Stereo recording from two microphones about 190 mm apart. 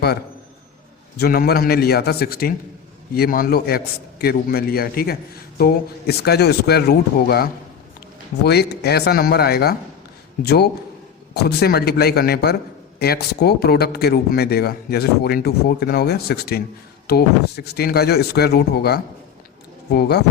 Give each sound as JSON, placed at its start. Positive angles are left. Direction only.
{"t": 1.1, "sound": "a man's voice", "side_deg": 55}
{"t": 8.4, "sound": "speech", "side_deg": 60}